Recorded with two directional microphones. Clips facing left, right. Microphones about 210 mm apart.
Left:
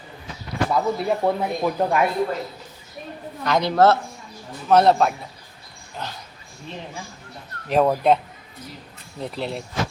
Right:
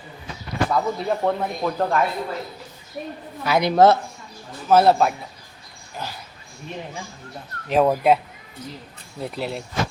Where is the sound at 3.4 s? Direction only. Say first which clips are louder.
Right 2 dB; 10° right (ahead or behind).